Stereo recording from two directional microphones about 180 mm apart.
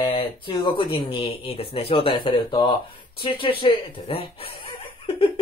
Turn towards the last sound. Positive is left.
turn(degrees=30)  # may be behind; listen again after turning